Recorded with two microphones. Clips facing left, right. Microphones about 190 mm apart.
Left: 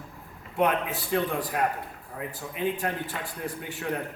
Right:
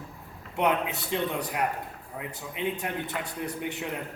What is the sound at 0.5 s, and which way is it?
A man's voice, 20° right (ahead or behind).